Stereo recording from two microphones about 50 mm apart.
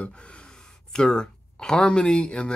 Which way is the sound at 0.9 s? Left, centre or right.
Centre.